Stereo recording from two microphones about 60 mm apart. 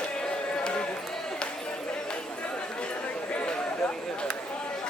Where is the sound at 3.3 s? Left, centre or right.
Centre.